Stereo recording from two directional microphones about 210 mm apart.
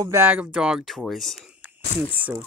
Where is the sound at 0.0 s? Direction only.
10° right (ahead or behind).